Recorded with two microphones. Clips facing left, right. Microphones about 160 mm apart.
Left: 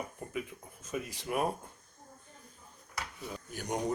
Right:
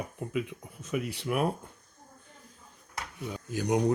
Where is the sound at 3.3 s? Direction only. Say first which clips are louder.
Right 9 dB; 90° right.